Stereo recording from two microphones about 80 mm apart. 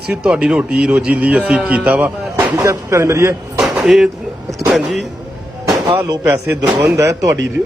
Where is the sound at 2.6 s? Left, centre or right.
Right.